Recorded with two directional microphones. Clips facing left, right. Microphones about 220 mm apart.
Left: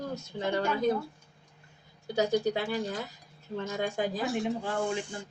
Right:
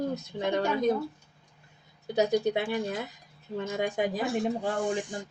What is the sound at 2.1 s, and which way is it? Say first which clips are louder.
Speech: right 2 dB; 20° right (ahead or behind).